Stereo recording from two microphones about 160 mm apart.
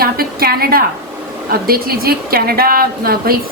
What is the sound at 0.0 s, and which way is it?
A woman's voice, 70° right (ahead or behind).